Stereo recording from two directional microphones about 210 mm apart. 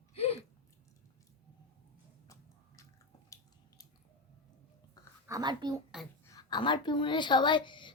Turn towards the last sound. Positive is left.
turn(degrees=20)  # may be behind; listen again after turning